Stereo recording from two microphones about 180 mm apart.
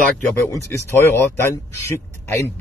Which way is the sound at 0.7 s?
15° left (ahead or behind).